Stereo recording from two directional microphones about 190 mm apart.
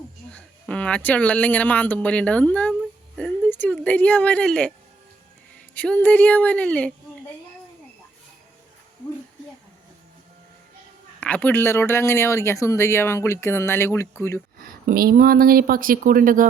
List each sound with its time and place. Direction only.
0.3 s speech: 5° left (ahead or behind)
5.7 s speech: 10° left (ahead or behind)
11.2 s speech: 10° left (ahead or behind)
14.6 s speech: 50° right (ahead or behind)